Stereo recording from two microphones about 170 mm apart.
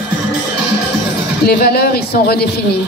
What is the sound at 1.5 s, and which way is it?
Speech, 65° left (ahead or behind).